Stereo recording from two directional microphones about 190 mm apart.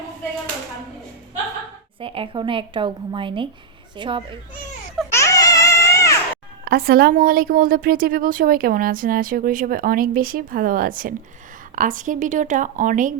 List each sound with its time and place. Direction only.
2.0 s a woman's voice: 30° right (ahead or behind)
5.1 s baby cry: 15° left (ahead or behind)
6.7 s a woman's voice: 55° right (ahead or behind)